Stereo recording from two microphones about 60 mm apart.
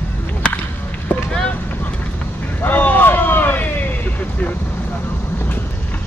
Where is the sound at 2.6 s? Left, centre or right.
Left.